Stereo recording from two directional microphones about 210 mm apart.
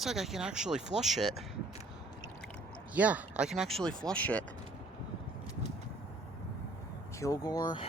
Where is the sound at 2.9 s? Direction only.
5° right (ahead or behind).